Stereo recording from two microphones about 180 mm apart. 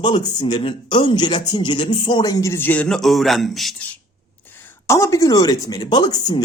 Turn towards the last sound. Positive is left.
turn(degrees=25)  # may be behind; listen again after turning